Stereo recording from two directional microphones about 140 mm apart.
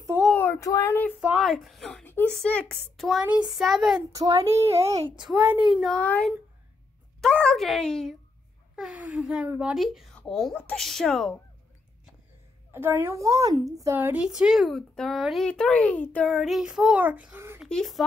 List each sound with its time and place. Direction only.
0.4 s speech: 20° left (ahead or behind)
1.4 s a woman's voice: centre (ahead or behind)
2.0 s a sound: 15° left (ahead or behind)
2.3 s a woman's voice: 5° left (ahead or behind)
4.1 s a child's voice: 25° right (ahead or behind)
5.4 s child singing: 15° right (ahead or behind)
5.7 s a woman's voice: centre (ahead or behind)
5.9 s a child's voice: 10° left (ahead or behind)
8.7 s a woman's voice: 5° right (ahead or behind)
12.7 s a child's voice: 15° right (ahead or behind)
13.9 s a woman's voice: 10° right (ahead or behind); by 16.3 s 10° left (ahead or behind)
16.3 s child singing: centre (ahead or behind)
17.6 s speech: 5° left (ahead or behind)